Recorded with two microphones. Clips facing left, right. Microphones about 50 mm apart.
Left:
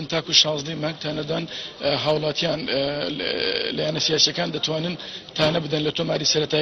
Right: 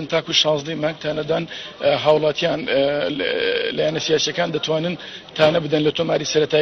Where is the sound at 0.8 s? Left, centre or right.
Centre.